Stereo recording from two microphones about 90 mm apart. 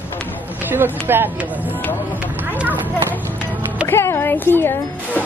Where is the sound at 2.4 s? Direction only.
20° right (ahead or behind).